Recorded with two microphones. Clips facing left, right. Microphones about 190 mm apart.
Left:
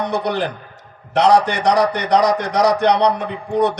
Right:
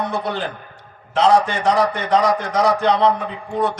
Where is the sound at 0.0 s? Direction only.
70° left (ahead or behind).